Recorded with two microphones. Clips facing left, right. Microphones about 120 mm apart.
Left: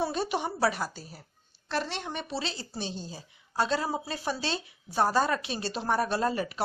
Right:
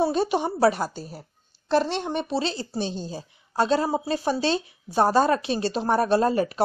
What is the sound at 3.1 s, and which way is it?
Speech, 45° right (ahead or behind).